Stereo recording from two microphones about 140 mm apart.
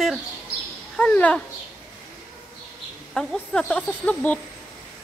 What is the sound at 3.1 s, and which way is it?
Speech, 5° left (ahead or behind).